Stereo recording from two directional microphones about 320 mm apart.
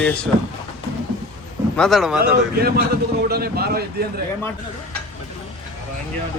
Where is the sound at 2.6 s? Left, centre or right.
Right.